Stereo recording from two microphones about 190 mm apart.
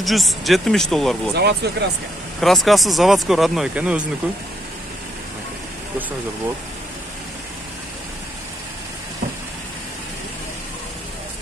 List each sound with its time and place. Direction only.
0.0 s speech: centre (ahead or behind)
1.3 s speech: 60° right (ahead or behind)
2.4 s speech: centre (ahead or behind)